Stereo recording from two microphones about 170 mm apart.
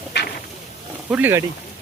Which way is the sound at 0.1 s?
90° left.